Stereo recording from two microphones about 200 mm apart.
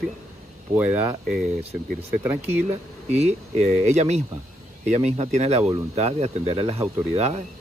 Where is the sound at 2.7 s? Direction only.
35° right (ahead or behind).